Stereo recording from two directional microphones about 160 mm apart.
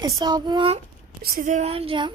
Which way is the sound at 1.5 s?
40° right (ahead or behind).